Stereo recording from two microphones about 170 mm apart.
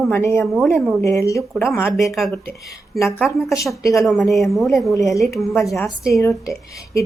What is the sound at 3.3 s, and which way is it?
Speech, 20° left (ahead or behind).